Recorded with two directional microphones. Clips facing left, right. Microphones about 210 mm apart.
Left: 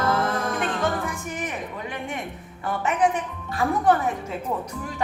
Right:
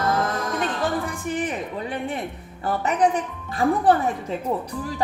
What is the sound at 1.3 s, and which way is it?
A woman's voice, 35° right (ahead or behind).